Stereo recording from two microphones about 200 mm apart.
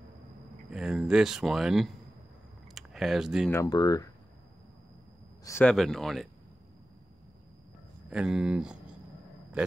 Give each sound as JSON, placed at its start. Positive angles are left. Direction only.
{"t": 0.7, "sound": "speech", "side_deg": -5}
{"t": 2.7, "sound": "a sound", "side_deg": 0}
{"t": 3.4, "sound": "speech", "side_deg": 15}
{"t": 5.4, "sound": "speech", "side_deg": 10}
{"t": 8.1, "sound": "speech", "side_deg": -5}